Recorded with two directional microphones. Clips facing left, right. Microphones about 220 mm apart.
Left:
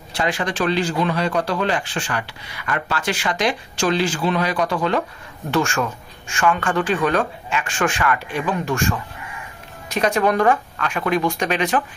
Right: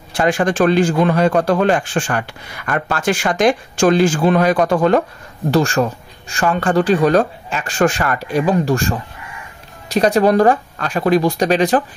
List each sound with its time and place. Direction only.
0.1 s a man's voice: 50° right (ahead or behind)
5.5 s speech: 35° right (ahead or behind)